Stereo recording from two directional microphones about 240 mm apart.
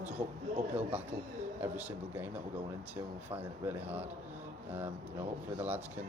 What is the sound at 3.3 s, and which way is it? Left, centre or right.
Speech, centre.